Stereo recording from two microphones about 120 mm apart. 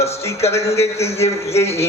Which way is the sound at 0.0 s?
60° left (ahead or behind).